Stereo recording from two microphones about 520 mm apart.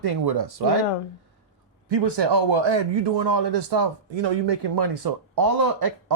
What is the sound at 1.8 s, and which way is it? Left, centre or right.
A man's voice, right.